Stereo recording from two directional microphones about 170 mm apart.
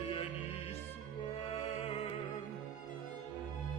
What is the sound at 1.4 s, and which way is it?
Music, 35° left (ahead or behind).